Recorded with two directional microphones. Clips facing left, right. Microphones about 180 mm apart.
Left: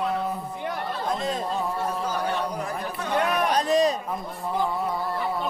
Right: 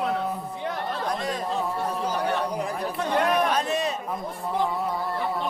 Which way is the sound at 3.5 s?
35° left (ahead or behind).